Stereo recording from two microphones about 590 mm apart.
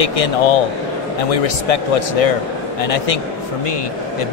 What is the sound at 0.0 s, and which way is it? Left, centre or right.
A man's voice, left.